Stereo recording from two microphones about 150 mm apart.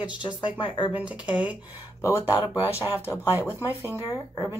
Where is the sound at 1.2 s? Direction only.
30° left (ahead or behind).